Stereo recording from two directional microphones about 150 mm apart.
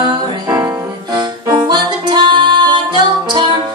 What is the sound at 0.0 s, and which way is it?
Music, 30° right (ahead or behind).